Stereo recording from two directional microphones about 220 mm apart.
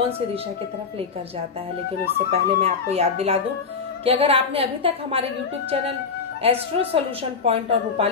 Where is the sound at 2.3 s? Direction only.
30° right (ahead or behind).